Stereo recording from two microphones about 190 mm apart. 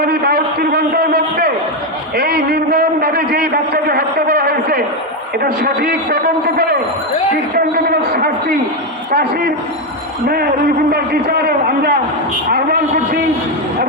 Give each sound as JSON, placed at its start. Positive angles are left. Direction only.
{"t": 0.0, "sound": "a man's voice", "side_deg": -55}
{"t": 2.1, "sound": "a sound", "side_deg": -60}
{"t": 5.4, "sound": "a man's voice", "side_deg": -55}
{"t": 10.9, "sound": "a man's voice", "side_deg": -55}